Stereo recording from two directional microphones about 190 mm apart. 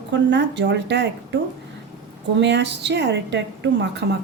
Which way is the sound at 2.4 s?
65° right (ahead or behind).